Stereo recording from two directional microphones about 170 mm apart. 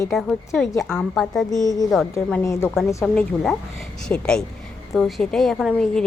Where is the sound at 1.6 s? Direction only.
20° left (ahead or behind).